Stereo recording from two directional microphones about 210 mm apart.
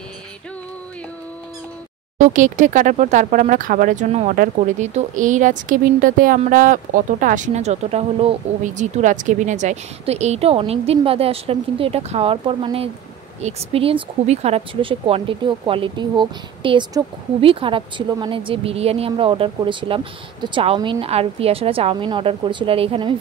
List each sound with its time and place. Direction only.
2.1 s speech: 35° right (ahead or behind)